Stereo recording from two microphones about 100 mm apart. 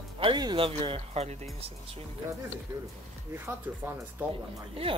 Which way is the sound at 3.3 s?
20° right (ahead or behind).